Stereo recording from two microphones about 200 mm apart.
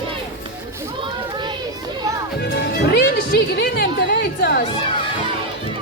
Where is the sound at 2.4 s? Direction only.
55° left (ahead or behind).